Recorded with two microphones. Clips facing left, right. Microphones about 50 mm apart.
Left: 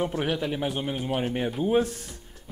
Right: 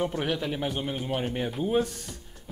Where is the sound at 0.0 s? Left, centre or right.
Centre.